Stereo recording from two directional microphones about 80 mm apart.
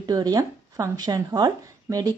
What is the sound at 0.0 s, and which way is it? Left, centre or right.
Speech, right.